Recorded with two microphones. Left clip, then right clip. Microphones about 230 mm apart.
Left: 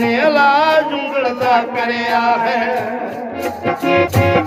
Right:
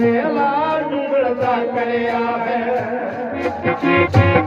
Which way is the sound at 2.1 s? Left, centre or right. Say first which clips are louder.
Left 5 dB; left.